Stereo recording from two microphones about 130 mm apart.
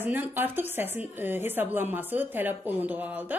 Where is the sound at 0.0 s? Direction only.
15° right (ahead or behind).